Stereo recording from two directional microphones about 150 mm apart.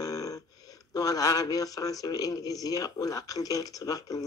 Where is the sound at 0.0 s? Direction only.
25° left (ahead or behind).